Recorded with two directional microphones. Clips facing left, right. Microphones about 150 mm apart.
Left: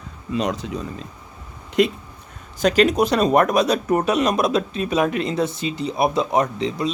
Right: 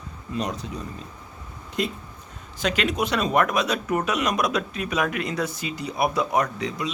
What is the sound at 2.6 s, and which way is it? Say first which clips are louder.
Speech: left 8 dB; 40° left (ahead or behind).